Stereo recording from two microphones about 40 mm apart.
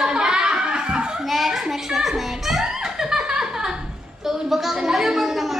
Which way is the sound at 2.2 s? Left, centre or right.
Centre.